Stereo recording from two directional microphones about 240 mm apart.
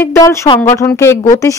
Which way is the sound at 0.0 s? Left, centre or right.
Centre.